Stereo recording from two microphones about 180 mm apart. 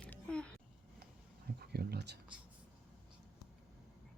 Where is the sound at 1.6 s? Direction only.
60° right (ahead or behind).